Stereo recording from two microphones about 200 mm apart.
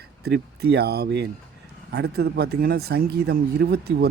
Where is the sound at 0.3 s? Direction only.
55° right (ahead or behind).